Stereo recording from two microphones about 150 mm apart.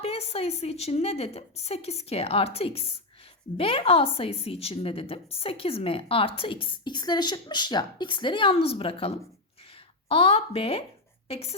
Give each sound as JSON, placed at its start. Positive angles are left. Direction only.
{"t": 0.0, "sound": "a woman's voice", "side_deg": 40}